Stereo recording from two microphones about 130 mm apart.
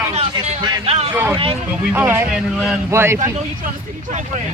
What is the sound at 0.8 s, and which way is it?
Speech, 50° right (ahead or behind).